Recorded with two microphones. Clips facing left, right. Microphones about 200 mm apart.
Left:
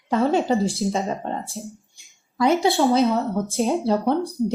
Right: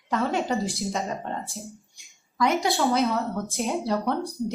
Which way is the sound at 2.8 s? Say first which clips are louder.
Left 5 dB; 30° left (ahead or behind).